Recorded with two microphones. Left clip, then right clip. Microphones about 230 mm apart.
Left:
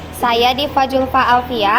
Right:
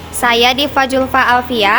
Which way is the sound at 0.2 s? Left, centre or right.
Right.